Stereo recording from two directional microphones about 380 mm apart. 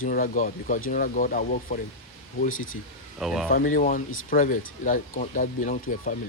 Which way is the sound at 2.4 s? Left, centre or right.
Left.